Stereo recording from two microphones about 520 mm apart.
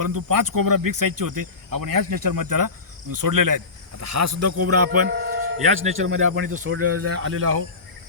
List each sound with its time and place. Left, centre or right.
0.0 s speech: right; by 6.7 s centre
6.7 s speech: right